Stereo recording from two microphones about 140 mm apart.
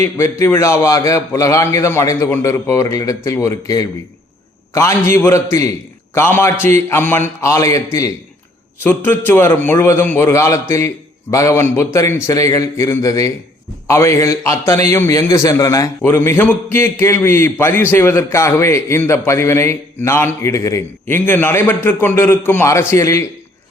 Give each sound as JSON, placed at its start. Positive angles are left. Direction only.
{"t": 0.0, "sound": "a man's voice", "side_deg": 20}